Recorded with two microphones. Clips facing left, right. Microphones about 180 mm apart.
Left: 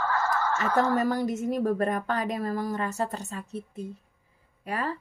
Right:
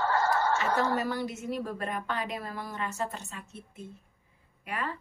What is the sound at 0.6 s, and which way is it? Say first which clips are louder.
A woman's voice: left 4 dB; 45° left (ahead or behind).